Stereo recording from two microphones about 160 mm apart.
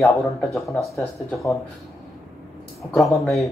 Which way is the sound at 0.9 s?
20° left (ahead or behind).